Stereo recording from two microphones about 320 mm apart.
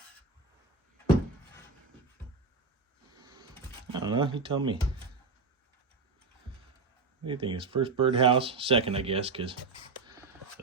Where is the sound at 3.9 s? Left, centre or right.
Centre.